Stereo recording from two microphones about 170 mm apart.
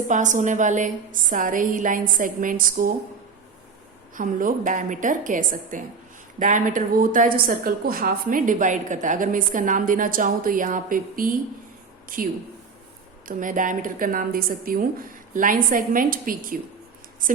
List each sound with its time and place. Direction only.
0.1 s a woman's voice: 50° right (ahead or behind)
4.1 s a woman's voice: 50° right (ahead or behind)